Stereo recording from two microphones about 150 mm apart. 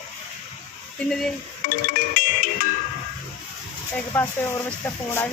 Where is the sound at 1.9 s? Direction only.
65° left (ahead or behind).